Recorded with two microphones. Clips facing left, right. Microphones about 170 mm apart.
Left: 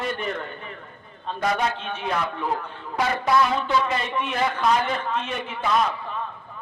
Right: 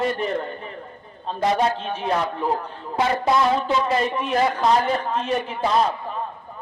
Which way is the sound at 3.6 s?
35° right (ahead or behind).